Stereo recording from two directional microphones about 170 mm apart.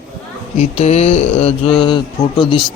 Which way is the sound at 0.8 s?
40° left (ahead or behind).